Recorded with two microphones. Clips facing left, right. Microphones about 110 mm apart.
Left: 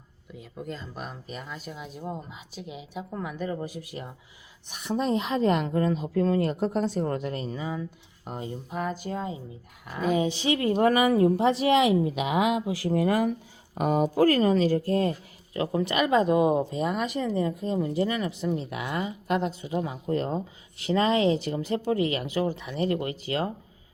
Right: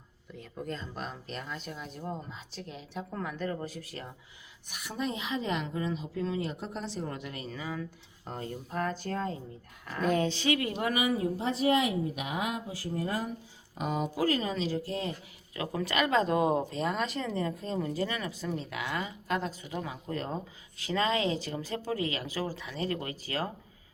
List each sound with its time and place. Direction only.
0.3 s speech: 5° left (ahead or behind)
4.7 s speech: 30° left (ahead or behind)
7.5 s speech: 25° left (ahead or behind)
8.2 s speech: 15° left (ahead or behind)
10.8 s speech: 45° left (ahead or behind); by 13.3 s 70° left (ahead or behind)
13.7 s speech: 55° left (ahead or behind)
15.5 s speech: 30° left (ahead or behind)